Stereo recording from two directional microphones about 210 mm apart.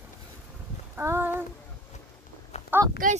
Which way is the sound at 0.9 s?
10° right (ahead or behind).